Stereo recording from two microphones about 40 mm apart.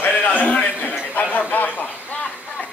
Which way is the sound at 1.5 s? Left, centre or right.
Left.